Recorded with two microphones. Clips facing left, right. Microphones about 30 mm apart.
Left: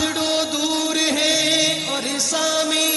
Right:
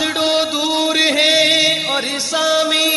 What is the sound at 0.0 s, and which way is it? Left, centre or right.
Music, right.